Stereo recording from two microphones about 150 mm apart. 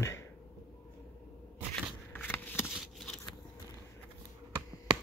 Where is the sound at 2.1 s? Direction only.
15° left (ahead or behind).